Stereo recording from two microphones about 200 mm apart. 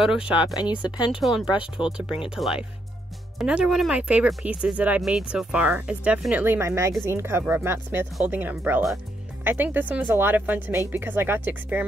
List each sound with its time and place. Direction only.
0.0 s speech: 5° right (ahead or behind)
0.6 s speech: 20° left (ahead or behind)
1.2 s speech: centre (ahead or behind)
1.5 s speech: 25° left (ahead or behind)
1.9 s speech: 5° right (ahead or behind)